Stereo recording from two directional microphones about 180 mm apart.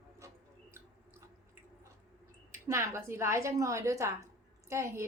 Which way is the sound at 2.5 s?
15° right (ahead or behind).